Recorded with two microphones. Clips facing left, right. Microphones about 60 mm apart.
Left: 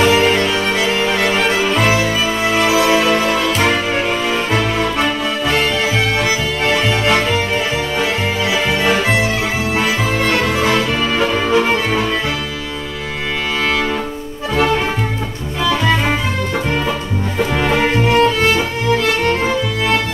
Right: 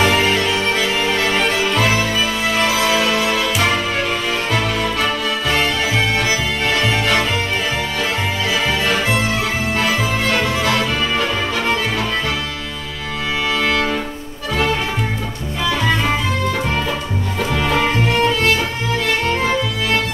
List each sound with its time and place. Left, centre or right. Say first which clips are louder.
0.0 s music: left 3 dB; centre
5.5 s music: left 2 dB; centre
10.2 s music: left 2 dB; centre
10.6 s music: left 2 dB; left
13.7 s music: left 2 dB; centre
17.7 s music: left 4 dB; centre